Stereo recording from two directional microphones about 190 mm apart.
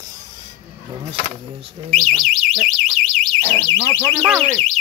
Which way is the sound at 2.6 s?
Centre (ahead or behind).